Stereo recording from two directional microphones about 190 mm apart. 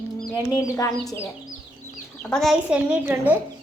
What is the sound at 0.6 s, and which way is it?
Speech, 15° left (ahead or behind).